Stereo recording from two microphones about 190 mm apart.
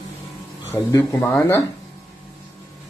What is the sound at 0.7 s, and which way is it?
Speech, 10° left (ahead or behind).